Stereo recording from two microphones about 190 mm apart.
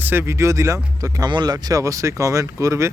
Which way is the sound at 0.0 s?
10° right (ahead or behind).